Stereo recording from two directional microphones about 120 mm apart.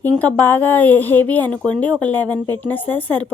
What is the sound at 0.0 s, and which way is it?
A woman's voice, 15° left (ahead or behind).